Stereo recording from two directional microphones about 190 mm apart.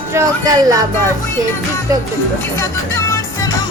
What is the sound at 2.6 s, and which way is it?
Music, 15° left (ahead or behind).